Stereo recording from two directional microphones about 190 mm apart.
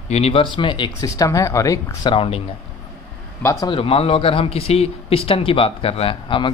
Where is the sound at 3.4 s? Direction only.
15° left (ahead or behind).